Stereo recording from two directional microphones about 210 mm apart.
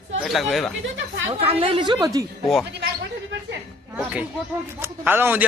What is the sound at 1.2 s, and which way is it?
Speech, 25° right (ahead or behind).